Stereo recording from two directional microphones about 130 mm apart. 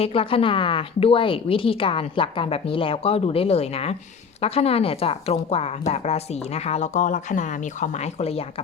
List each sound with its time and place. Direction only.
0.0 s a woman's voice: 45° left (ahead or behind)